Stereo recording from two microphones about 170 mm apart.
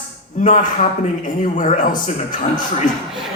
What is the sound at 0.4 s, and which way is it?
A man's voice, 50° left (ahead or behind).